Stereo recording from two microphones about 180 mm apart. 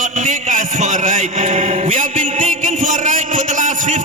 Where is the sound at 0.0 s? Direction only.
45° right (ahead or behind).